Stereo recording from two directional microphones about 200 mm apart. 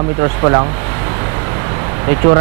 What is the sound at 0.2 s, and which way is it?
Speech, 20° right (ahead or behind).